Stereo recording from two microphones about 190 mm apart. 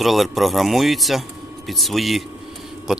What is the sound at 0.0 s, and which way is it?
Speech, centre (ahead or behind).